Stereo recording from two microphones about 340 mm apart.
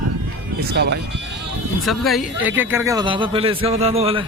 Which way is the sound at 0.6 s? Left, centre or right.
Right.